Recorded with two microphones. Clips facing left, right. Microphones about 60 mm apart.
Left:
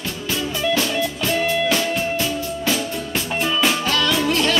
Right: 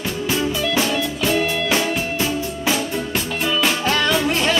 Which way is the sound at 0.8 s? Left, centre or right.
Centre.